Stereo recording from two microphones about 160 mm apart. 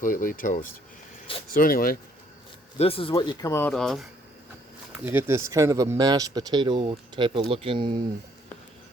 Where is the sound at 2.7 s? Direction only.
35° left (ahead or behind); by 3.7 s 20° left (ahead or behind).